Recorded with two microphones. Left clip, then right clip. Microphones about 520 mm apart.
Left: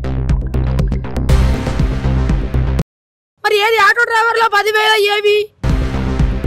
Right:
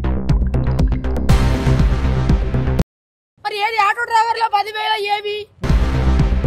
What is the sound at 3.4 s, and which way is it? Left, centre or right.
Speech, left.